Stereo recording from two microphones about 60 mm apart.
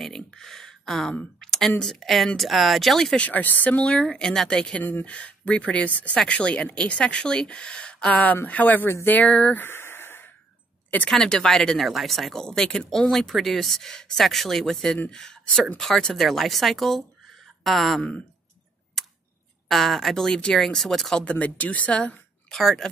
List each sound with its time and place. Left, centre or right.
0.0 s a sound: centre
1.8 s speech: centre
3.2 s speech: left
4.0 s speech: centre
4.7 s speech: left
5.0 s speech: left
9.6 s a sound: left
11.1 s speech: centre
19.0 s tick: centre
19.7 s speech: centre
21.2 s speech: left
22.5 s speech: centre